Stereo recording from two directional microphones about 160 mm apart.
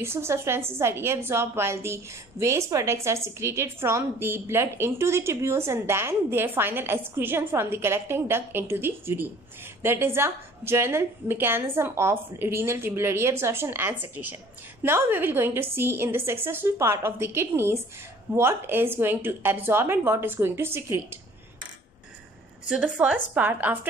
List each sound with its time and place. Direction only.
0.0 s a woman's voice: 15° right (ahead or behind)
22.7 s a woman's voice: 5° right (ahead or behind)